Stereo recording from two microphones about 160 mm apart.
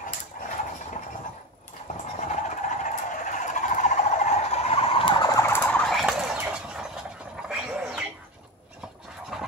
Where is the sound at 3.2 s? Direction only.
50° left (ahead or behind); by 6.6 s 5° right (ahead or behind).